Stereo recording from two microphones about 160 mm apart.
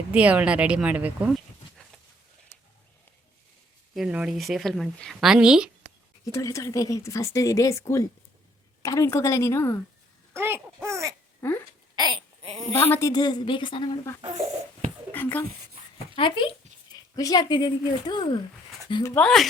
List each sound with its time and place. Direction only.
0.1 s a woman's voice: 10° right (ahead or behind)
3.9 s speech: 5° right (ahead or behind)
6.2 s a woman's voice: 20° left (ahead or behind)
10.3 s speech: 15° right (ahead or behind)
10.8 s a sound: 20° right (ahead or behind)
11.4 s a woman's voice: 10° left (ahead or behind)
11.9 s a sound: 25° right (ahead or behind)
12.7 s speech: 15° left (ahead or behind); by 13.9 s 30° left (ahead or behind)
15.1 s a sound: 10° left (ahead or behind)
16.1 s speech: 30° left (ahead or behind)
19.2 s speech: centre (ahead or behind)